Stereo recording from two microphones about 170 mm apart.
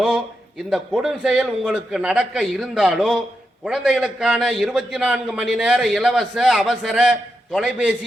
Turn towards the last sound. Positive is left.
turn(degrees=-5)  # may be behind; listen again after turning